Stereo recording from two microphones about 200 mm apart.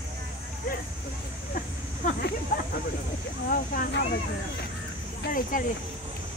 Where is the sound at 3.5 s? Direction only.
45° left (ahead or behind).